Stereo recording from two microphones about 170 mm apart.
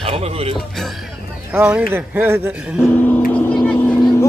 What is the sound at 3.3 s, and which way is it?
Vehicle, 10° left (ahead or behind).